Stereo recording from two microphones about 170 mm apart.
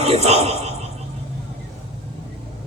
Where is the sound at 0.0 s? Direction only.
35° right (ahead or behind).